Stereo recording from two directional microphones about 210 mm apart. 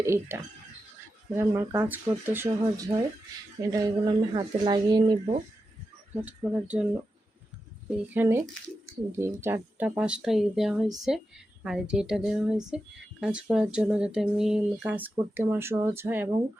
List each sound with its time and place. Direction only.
0.0 s speech: 15° right (ahead or behind)
1.4 s speech: 10° right (ahead or behind)
6.2 s speech: 5° right (ahead or behind)
7.9 s a woman's voice: 10° right (ahead or behind)